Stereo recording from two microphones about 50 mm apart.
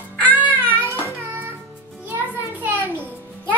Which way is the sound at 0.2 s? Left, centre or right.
Left.